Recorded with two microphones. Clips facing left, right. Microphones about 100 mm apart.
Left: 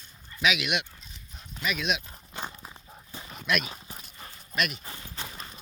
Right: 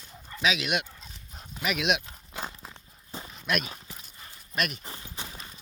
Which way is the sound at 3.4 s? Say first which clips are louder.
Left 1 dB; 40° right (ahead or behind).